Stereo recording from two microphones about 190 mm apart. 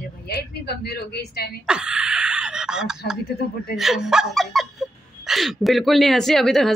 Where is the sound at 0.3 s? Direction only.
55° left (ahead or behind).